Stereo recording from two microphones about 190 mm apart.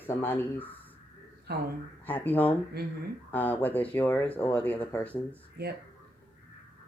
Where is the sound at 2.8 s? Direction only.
55° right (ahead or behind).